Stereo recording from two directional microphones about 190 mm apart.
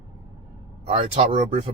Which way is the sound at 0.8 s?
30° right (ahead or behind).